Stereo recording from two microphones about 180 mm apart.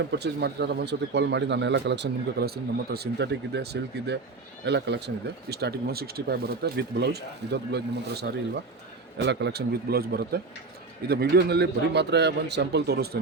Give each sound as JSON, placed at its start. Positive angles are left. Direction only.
{"t": 0.1, "sound": "speech", "side_deg": -70}